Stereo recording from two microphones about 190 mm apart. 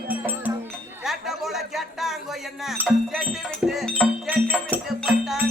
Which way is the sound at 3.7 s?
Centre (ahead or behind).